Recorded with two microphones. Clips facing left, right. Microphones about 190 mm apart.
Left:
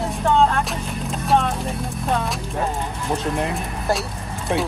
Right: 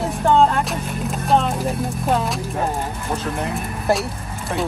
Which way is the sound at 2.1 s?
Centre (ahead or behind).